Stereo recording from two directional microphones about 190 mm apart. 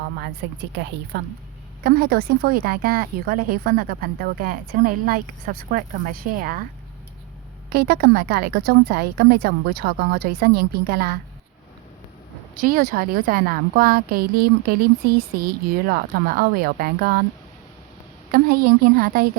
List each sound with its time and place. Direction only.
0.4 s a woman's voice: 65° right (ahead or behind); by 6.7 s 50° right (ahead or behind)
7.7 s a woman's voice: 55° right (ahead or behind)
12.5 s a woman's voice: 50° right (ahead or behind)
18.3 s a woman's voice: 50° right (ahead or behind)